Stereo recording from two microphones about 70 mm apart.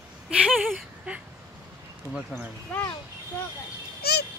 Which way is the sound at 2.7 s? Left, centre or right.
Left.